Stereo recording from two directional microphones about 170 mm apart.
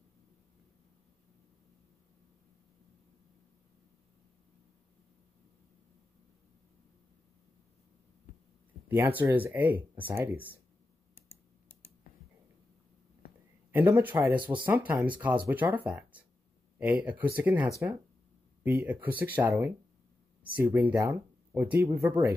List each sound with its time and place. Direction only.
8.8 s speech: 10° right (ahead or behind)
13.7 s speech: 10° right (ahead or behind)
14.4 s speech: 30° right (ahead or behind)
14.7 s speech: 10° right (ahead or behind)